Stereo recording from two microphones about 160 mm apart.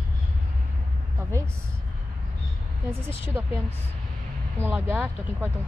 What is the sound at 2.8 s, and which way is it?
Speech, 15° right (ahead or behind).